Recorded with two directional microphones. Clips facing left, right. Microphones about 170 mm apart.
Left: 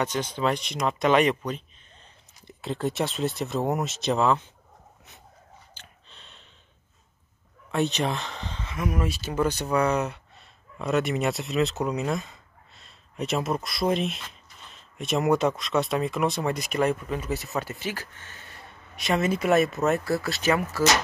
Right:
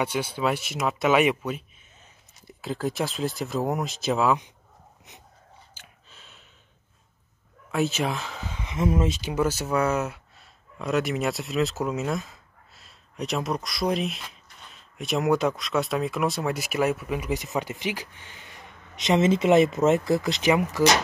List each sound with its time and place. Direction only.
0.0 s speech: 10° right (ahead or behind)
5.8 s a sound: 5° right (ahead or behind)
7.7 s speech: centre (ahead or behind)
8.7 s speech: 25° right (ahead or behind)
9.3 s speech: 5° right (ahead or behind)